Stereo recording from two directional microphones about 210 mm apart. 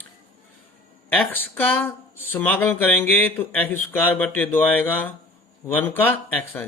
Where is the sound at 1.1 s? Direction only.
10° left (ahead or behind).